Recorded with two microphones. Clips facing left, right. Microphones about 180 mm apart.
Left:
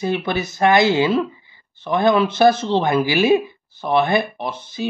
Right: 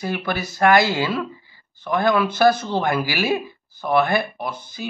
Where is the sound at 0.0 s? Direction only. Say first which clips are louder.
Left 4 dB; 20° left (ahead or behind).